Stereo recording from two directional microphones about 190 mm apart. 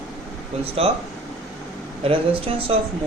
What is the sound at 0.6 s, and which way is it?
Speech, 30° right (ahead or behind).